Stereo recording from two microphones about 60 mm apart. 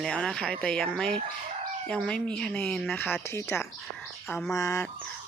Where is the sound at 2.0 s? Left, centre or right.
Left.